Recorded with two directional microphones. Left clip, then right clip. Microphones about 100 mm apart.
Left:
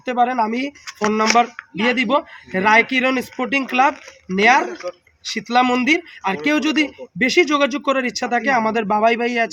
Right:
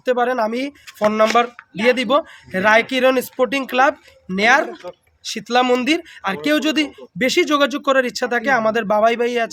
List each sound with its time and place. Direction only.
0.0 s speech: 40° right (ahead or behind)